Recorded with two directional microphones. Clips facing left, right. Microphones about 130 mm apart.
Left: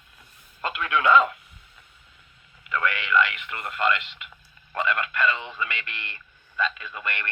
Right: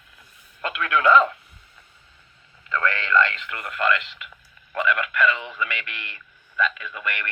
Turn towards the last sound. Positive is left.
turn(degrees=30)  # may be behind; listen again after turning